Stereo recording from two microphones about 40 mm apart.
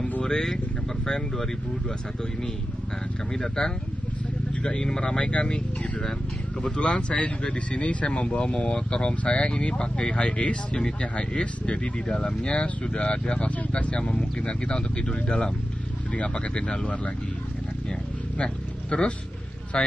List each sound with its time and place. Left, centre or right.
0.2 s speech: centre
3.3 s speech: centre
4.5 s speech: left
5.8 s speech: centre
18.4 s speech: left